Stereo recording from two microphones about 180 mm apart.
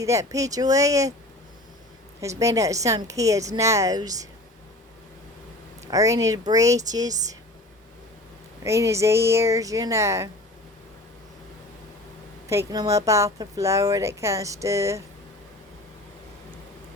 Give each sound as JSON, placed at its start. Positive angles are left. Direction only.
{"t": 0.0, "sound": "a woman's voice", "side_deg": -15}
{"t": 2.2, "sound": "a woman's voice", "side_deg": -15}
{"t": 5.8, "sound": "speech", "side_deg": -20}
{"t": 8.6, "sound": "a woman's voice", "side_deg": -15}
{"t": 12.5, "sound": "a woman's voice", "side_deg": -20}